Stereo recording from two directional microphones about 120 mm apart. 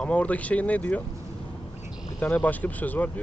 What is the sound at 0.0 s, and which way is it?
Speech, 10° left (ahead or behind).